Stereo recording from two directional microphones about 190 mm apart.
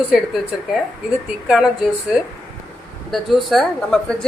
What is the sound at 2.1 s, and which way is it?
Speech, centre (ahead or behind).